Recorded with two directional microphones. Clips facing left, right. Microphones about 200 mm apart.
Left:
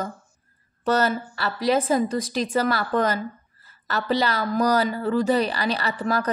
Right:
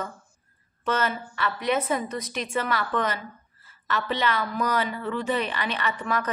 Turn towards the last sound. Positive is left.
turn(degrees=35)  # may be behind; listen again after turning